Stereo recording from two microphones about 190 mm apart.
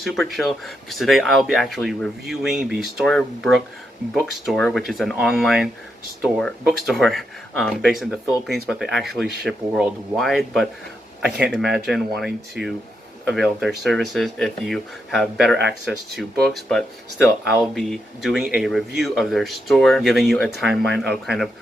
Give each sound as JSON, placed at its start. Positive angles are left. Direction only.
{"t": 0.0, "sound": "speech", "side_deg": 0}
{"t": 12.6, "sound": "speech", "side_deg": -65}
{"t": 13.2, "sound": "speech", "side_deg": 0}
{"t": 15.5, "sound": "speech", "side_deg": -65}
{"t": 16.2, "sound": "speech", "side_deg": 0}